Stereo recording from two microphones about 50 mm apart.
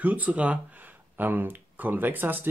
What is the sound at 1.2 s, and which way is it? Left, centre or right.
Speech, right.